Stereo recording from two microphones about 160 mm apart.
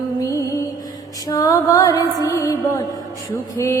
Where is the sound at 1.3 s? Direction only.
20° left (ahead or behind).